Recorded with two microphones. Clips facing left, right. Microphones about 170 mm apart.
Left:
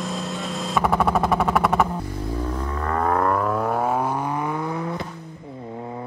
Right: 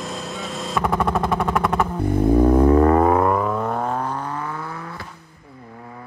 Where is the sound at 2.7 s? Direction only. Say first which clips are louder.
Right 11 dB; 30° right (ahead or behind).